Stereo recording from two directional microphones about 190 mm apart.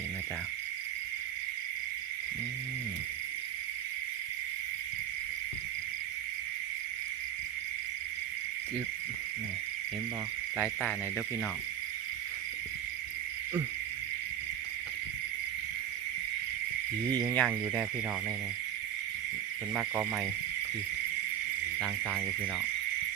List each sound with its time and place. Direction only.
17.3 s cricket: 5° left (ahead or behind)
19.7 s cricket: centre (ahead or behind)